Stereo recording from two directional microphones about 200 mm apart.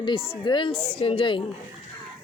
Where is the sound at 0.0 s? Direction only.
25° left (ahead or behind).